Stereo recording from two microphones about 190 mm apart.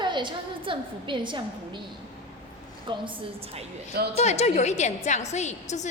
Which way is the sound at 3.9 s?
55° right (ahead or behind).